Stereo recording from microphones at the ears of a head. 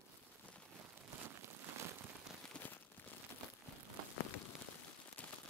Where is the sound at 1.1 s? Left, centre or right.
Right.